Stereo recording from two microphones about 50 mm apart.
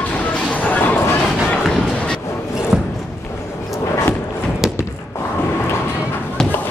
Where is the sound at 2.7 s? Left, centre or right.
Centre.